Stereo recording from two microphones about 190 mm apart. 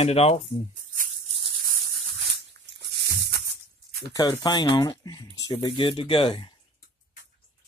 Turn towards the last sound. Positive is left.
turn(degrees=25)  # may be behind; listen again after turning